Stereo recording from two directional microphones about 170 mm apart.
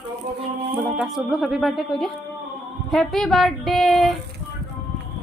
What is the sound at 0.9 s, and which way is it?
A woman's voice, centre (ahead or behind).